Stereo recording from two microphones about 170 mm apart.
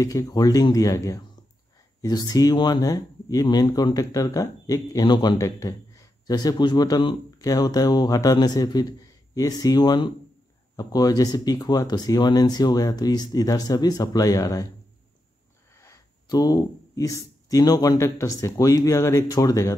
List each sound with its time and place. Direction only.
0.0 s speech: 20° left (ahead or behind)
15.7 s speech: 20° left (ahead or behind)